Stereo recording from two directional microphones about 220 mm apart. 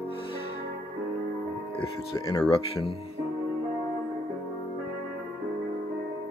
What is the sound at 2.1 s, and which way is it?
Speech, 15° left (ahead or behind).